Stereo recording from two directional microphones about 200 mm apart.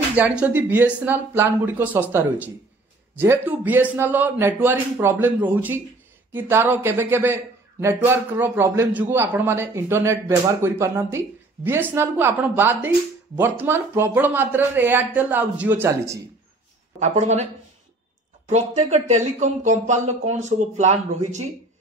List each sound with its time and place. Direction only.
0.1 s a man's voice: 5° right (ahead or behind)
17.0 s speech: 35° right (ahead or behind)
18.5 s speech: 35° right (ahead or behind)